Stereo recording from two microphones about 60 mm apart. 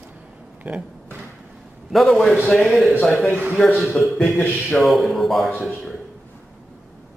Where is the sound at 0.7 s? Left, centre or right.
Right.